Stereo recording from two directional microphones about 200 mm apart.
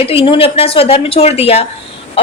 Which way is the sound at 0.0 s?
30° left (ahead or behind).